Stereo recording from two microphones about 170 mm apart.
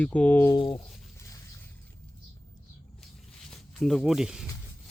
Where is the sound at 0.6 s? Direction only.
30° left (ahead or behind).